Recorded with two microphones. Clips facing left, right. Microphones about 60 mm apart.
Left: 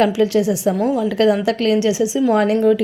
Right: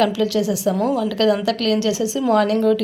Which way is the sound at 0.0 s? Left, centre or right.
Left.